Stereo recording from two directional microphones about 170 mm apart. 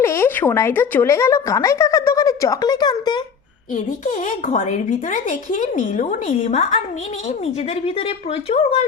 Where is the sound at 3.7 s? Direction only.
45° left (ahead or behind).